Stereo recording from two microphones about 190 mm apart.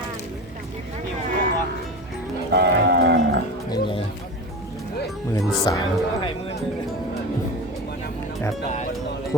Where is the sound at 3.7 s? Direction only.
30° left (ahead or behind).